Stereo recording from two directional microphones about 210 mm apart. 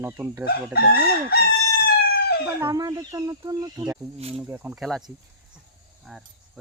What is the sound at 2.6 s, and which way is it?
Speech, 15° right (ahead or behind).